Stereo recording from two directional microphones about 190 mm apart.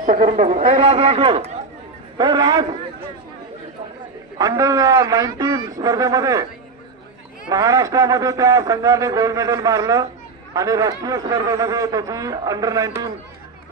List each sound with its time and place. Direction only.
0.0 s speech: 45° right (ahead or behind)
0.7 s a man's voice: 30° right (ahead or behind)
4.4 s a man's voice: 15° right (ahead or behind)
7.4 s a man's voice: 15° right (ahead or behind)